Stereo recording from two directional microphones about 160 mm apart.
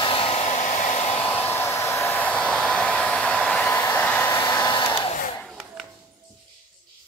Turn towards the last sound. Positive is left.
turn(degrees=0)  # may be behind; listen again after turning